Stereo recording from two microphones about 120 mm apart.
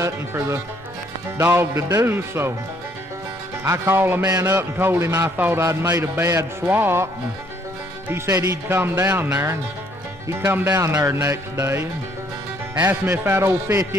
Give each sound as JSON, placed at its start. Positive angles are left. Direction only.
{"t": 0.0, "sound": "a man's voice", "side_deg": -25}
{"t": 3.6, "sound": "a man's voice", "side_deg": -20}
{"t": 8.1, "sound": "a man's voice", "side_deg": -25}